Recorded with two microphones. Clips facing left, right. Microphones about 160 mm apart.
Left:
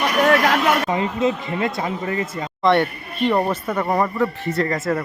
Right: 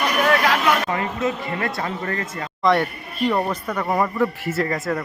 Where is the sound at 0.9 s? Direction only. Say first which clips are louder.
Left 3 dB; 20° left (ahead or behind).